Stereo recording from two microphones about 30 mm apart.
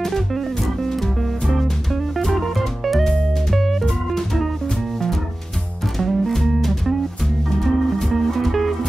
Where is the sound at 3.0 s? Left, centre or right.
Centre.